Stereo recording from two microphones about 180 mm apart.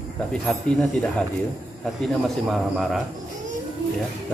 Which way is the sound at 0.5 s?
5° left (ahead or behind).